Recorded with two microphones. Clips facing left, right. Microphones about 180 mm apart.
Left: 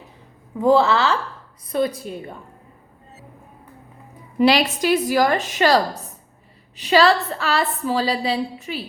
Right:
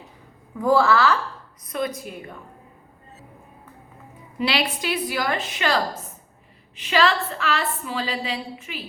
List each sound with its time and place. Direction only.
0.6 s a woman's voice: 25° left (ahead or behind)
4.4 s a woman's voice: 45° left (ahead or behind)